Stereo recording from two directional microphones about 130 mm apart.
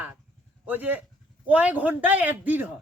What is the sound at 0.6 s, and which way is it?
A man's voice, 15° right (ahead or behind).